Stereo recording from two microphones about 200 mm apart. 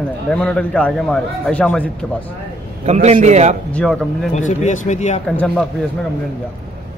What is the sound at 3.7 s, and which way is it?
Speech, 5° left (ahead or behind).